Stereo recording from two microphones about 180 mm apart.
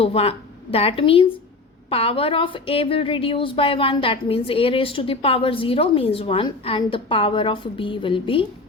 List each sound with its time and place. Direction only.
0.0 s a woman's voice: 35° left (ahead or behind)